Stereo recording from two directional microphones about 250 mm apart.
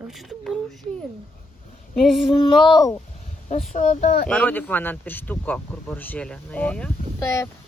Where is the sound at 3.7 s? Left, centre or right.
Left.